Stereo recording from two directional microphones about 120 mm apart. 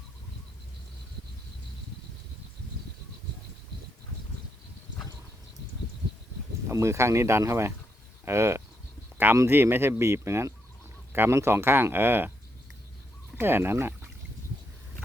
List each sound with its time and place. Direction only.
6.7 s speech: 25° right (ahead or behind)
13.3 s speech: 20° right (ahead or behind)